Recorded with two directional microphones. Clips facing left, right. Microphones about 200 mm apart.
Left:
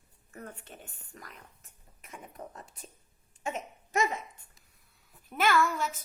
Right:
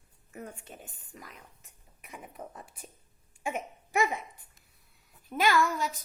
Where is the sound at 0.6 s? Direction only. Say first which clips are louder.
Right 1 dB; centre (ahead or behind).